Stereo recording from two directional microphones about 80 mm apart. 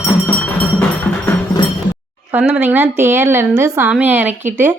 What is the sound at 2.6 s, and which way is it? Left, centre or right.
A woman's voice, right.